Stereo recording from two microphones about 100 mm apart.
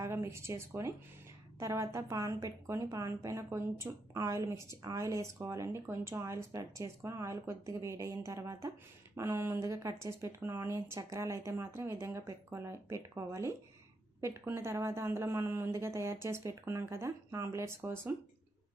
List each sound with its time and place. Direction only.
0.0 s a woman's voice: 25° right (ahead or behind)